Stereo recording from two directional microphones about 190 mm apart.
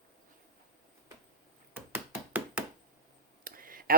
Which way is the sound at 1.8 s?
10° right (ahead or behind).